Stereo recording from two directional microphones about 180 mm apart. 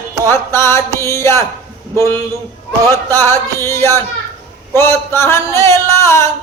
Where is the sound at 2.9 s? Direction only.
15° left (ahead or behind).